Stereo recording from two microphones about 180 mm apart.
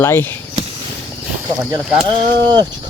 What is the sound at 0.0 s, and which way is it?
Speech, 10° left (ahead or behind).